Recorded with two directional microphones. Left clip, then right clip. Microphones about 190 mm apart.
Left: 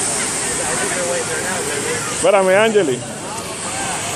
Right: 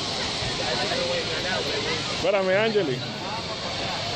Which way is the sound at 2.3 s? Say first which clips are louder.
Left 10 dB; 35° left (ahead or behind).